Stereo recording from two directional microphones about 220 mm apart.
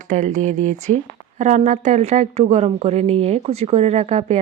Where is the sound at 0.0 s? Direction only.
35° right (ahead or behind).